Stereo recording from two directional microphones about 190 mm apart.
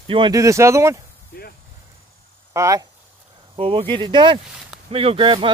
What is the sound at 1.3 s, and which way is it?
Speech, 50° left (ahead or behind).